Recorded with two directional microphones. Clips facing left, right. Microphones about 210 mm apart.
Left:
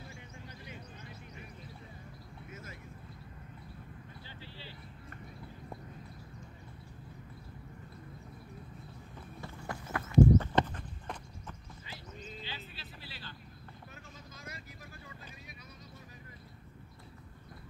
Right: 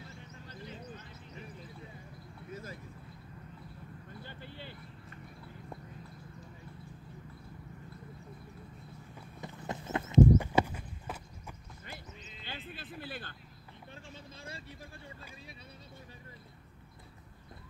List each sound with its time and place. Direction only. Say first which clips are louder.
0.1 s a sound: even; 10° left (ahead or behind)
2.5 s vehicle: right 6 dB; 35° right (ahead or behind)
4.2 s a sound: right 3 dB; 55° right (ahead or behind)
9.4 s horse: right 2 dB; 20° right (ahead or behind)
10.3 s horse: even; 10° right (ahead or behind)
12.4 s vehicle: right 3 dB; 50° right (ahead or behind)